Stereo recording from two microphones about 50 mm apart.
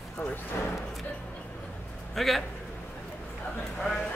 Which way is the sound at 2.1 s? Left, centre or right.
Centre.